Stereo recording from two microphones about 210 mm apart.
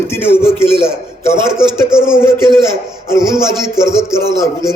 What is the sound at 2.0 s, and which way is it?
Speech, 5° right (ahead or behind).